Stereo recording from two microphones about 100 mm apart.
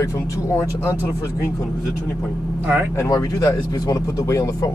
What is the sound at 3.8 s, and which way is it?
Speech, 35° left (ahead or behind).